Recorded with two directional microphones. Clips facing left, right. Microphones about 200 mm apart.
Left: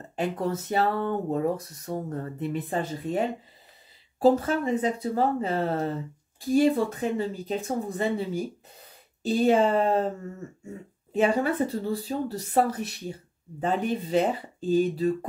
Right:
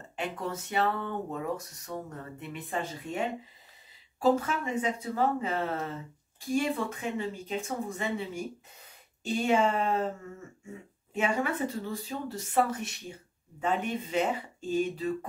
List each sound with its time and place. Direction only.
0.1 s speech: 35° left (ahead or behind)
11.1 s speech: 35° left (ahead or behind)